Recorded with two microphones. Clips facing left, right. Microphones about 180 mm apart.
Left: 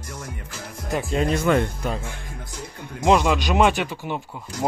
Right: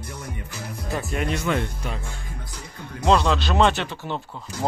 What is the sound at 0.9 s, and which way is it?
Speech, 25° left (ahead or behind).